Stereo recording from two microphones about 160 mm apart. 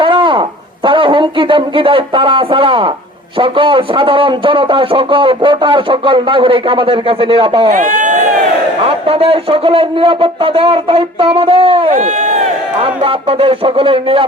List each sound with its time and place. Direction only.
0.0 s a sound: 30° right (ahead or behind)
0.9 s a man's voice: 35° right (ahead or behind)
7.8 s run: 50° right (ahead or behind)
8.8 s a man's voice: 35° right (ahead or behind)
11.9 s speech: 45° right (ahead or behind)
12.8 s a man's voice: 35° right (ahead or behind)